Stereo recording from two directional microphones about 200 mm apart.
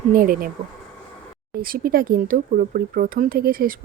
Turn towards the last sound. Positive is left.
turn(degrees=-45)  # may be behind; listen again after turning